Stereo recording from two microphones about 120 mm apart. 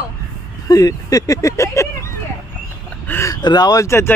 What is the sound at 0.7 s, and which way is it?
A man's voice, 30° left (ahead or behind).